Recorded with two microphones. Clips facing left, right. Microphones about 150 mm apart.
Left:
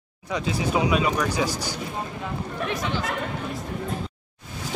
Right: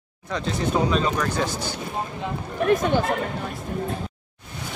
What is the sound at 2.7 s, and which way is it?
Speech, 50° right (ahead or behind).